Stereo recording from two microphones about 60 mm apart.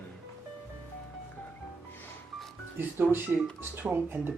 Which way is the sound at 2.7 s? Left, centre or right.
Right.